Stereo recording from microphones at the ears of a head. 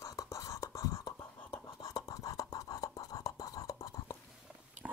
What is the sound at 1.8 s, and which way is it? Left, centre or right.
Whispering, left.